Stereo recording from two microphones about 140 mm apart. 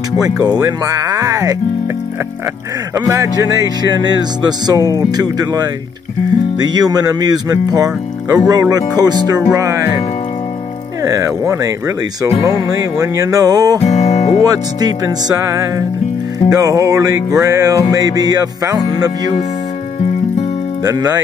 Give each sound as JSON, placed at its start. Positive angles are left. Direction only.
{"t": 0.2, "sound": "speech", "side_deg": -25}
{"t": 3.1, "sound": "speech", "side_deg": -25}
{"t": 11.1, "sound": "speech", "side_deg": -20}
{"t": 13.8, "sound": "music", "side_deg": 50}
{"t": 14.4, "sound": "speech", "side_deg": -25}
{"t": 20.8, "sound": "speech", "side_deg": -25}